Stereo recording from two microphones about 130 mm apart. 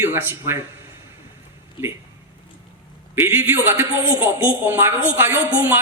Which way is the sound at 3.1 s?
15° right (ahead or behind).